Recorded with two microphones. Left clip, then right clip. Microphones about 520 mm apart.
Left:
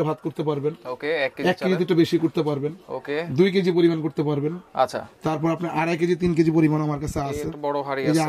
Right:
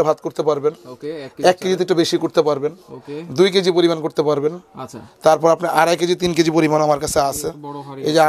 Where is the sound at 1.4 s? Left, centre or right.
Right.